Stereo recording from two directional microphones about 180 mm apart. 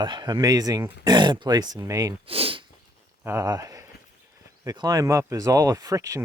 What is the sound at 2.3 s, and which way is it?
Speech, 30° right (ahead or behind).